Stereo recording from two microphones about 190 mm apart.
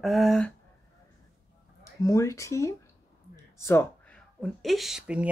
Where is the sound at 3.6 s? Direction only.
15° left (ahead or behind).